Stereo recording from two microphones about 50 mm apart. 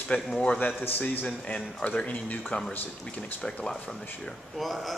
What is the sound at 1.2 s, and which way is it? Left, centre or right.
Speech, left.